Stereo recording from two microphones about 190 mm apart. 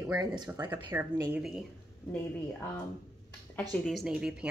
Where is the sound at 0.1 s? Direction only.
20° right (ahead or behind).